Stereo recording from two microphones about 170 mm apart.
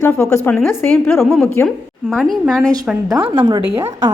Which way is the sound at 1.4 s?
10° left (ahead or behind).